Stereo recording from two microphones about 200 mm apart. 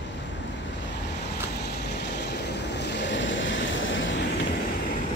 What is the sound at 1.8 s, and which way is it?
Vehicle, 60° left (ahead or behind).